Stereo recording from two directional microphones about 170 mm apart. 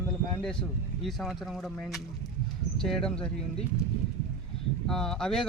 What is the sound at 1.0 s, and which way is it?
Speech, centre (ahead or behind).